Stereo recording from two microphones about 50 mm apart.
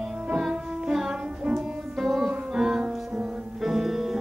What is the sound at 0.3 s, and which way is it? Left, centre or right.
Music, centre.